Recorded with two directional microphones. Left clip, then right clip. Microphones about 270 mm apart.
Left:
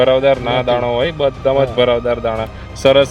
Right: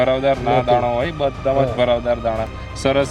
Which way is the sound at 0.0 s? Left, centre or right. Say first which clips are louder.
Left 5 dB; left.